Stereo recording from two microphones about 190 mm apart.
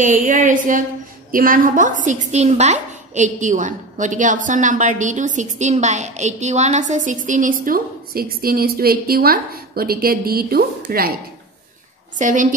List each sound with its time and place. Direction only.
0.0 s a woman's voice: 40° right (ahead or behind)
12.2 s a woman's voice: 45° right (ahead or behind)